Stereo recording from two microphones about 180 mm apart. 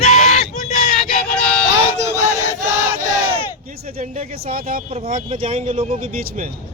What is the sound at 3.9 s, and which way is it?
Speech, 35° right (ahead or behind).